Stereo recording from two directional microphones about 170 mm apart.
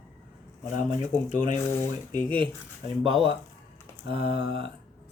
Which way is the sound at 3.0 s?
30° right (ahead or behind).